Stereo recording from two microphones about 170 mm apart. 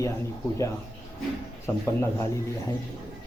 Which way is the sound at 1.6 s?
15° left (ahead or behind).